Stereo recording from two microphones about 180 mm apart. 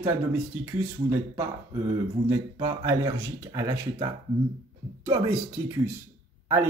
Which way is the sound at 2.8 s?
20° right (ahead or behind).